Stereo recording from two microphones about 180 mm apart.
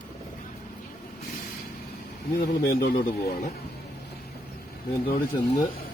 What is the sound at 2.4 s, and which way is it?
Speech, 60° left (ahead or behind).